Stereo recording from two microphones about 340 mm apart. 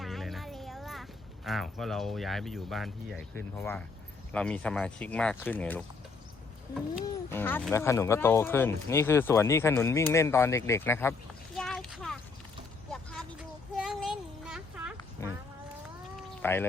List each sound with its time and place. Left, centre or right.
0.0 s a sound: centre
1.5 s speech: centre
7.0 s speech: centre
11.5 s a sound: centre
12.9 s vehicle: centre
13.7 s child singing: centre
16.4 s speech: centre